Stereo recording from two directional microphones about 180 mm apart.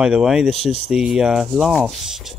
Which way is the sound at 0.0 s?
5° right (ahead or behind).